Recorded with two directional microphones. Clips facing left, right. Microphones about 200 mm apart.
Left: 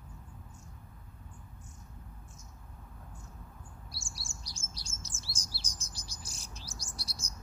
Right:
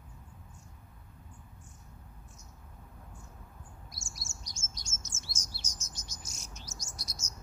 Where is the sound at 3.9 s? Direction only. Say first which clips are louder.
Left 1 dB; 30° left (ahead or behind).